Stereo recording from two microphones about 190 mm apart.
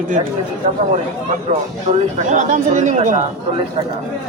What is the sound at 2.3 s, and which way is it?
Speech, 40° right (ahead or behind).